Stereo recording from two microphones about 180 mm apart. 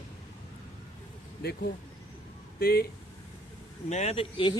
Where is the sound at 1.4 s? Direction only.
65° left (ahead or behind).